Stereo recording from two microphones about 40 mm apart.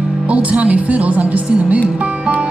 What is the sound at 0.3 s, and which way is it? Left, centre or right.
Speech, right.